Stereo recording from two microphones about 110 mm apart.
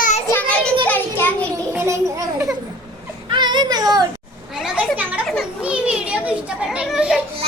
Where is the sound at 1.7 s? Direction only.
25° right (ahead or behind).